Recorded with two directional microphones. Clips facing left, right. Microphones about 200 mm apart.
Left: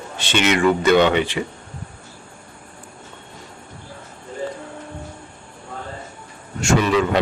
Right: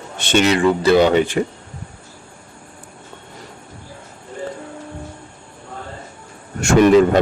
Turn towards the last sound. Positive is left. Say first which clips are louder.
# right 6 dB
turn(degrees=-45)  # may be behind; listen again after turning